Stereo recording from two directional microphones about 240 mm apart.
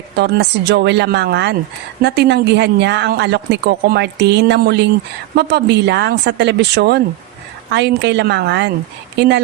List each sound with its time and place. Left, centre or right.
0.2 s speech: right